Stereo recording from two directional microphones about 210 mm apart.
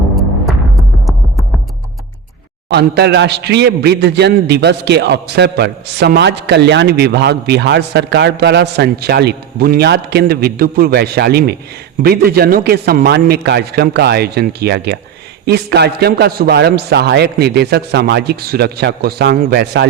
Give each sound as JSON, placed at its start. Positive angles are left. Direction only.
{"t": 2.6, "sound": "a man's voice", "side_deg": -50}